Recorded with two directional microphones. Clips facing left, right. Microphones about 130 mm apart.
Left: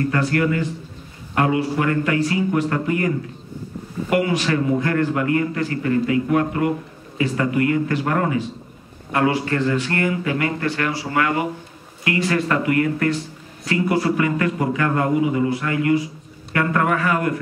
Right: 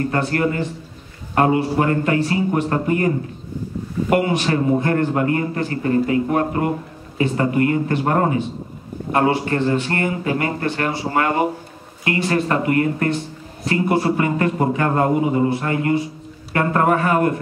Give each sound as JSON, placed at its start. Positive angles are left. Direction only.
{"t": 0.0, "sound": "a man's voice", "side_deg": -35}